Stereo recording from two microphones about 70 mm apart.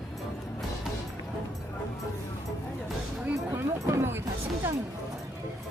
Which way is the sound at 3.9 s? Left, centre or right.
Right.